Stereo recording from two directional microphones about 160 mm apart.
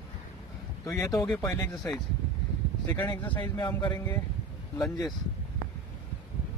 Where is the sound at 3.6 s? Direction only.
25° left (ahead or behind).